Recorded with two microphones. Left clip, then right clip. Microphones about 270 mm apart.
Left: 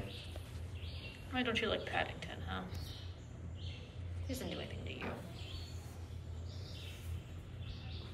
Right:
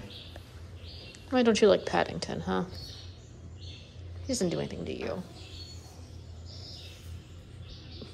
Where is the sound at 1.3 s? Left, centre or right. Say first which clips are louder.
Right 13 dB; centre.